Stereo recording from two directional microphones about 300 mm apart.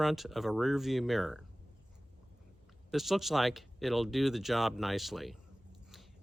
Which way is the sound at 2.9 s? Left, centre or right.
Centre.